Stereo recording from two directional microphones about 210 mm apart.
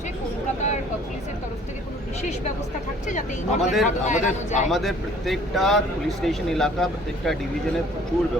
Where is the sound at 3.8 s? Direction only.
35° left (ahead or behind).